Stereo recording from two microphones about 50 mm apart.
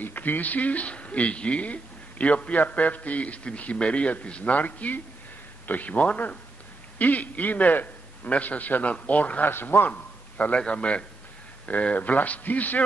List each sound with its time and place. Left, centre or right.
0.0 s a man's voice: left
9.5 s a man's voice: left
9.8 s a sound: left
10.6 s a man's voice: left